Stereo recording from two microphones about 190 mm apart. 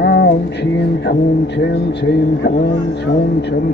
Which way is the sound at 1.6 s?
65° left (ahead or behind).